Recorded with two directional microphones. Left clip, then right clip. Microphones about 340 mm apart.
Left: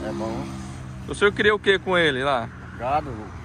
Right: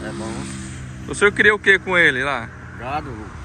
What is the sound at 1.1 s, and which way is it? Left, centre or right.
Speech, centre.